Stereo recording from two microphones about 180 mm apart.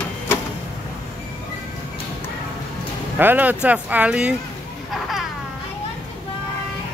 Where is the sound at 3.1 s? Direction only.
10° right (ahead or behind).